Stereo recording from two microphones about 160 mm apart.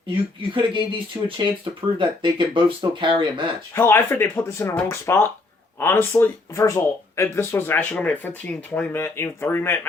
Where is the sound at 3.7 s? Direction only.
15° left (ahead or behind).